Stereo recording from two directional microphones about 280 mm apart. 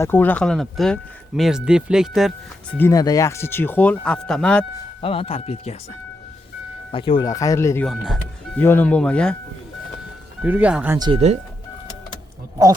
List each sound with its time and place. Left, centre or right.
0.0 s speech: centre
2.7 s speech: centre
4.9 s speech: centre
6.9 s speech: centre
10.4 s speech: centre